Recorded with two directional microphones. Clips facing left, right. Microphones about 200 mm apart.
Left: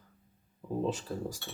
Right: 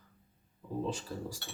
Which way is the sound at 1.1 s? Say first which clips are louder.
Left 4 dB; 55° left (ahead or behind).